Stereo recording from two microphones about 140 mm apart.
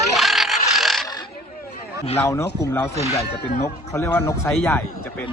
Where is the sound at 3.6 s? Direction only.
20° left (ahead or behind).